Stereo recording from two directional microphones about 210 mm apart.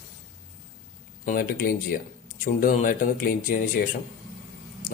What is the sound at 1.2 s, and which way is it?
Speech, 40° left (ahead or behind).